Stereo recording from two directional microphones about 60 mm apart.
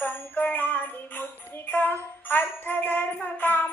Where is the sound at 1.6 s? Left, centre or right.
Left.